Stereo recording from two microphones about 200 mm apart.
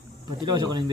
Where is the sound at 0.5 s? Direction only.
20° right (ahead or behind).